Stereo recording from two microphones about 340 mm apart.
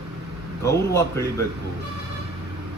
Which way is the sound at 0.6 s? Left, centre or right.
Centre.